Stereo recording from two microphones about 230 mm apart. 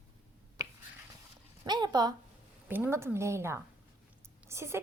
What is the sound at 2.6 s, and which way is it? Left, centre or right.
A woman's voice, centre.